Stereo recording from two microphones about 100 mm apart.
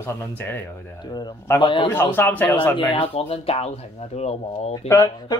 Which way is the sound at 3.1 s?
80° left.